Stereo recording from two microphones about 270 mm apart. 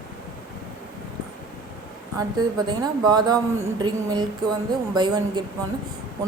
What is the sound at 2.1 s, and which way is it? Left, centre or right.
A woman's voice, centre.